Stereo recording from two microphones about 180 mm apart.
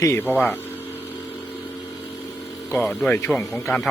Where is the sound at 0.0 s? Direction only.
15° left (ahead or behind).